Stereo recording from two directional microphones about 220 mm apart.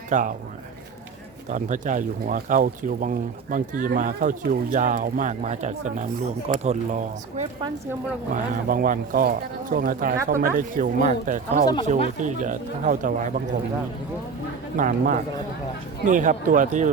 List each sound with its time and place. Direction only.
0.1 s speech: 35° right (ahead or behind)
1.5 s speech: 35° right (ahead or behind)
14.8 s speech: 35° right (ahead or behind)